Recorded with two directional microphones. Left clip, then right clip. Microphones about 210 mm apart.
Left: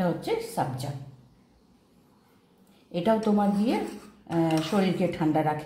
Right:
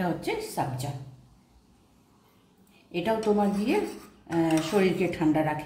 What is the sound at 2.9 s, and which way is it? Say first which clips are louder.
Speech: left 1 dB; 15° left (ahead or behind).